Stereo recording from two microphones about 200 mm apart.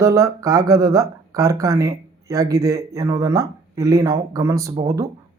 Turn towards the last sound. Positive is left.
turn(degrees=-15)  # may be behind; listen again after turning